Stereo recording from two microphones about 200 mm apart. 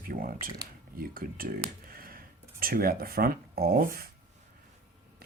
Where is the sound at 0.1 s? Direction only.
45° right (ahead or behind).